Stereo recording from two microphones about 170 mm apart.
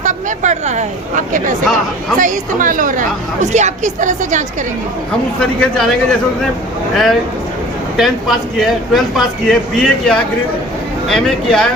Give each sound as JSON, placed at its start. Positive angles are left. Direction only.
{"t": 0.0, "sound": "a woman's voice", "side_deg": -45}
{"t": 5.4, "sound": "speech", "side_deg": 5}